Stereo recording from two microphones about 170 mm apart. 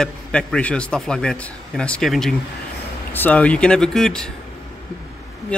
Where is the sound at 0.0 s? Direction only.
5° left (ahead or behind).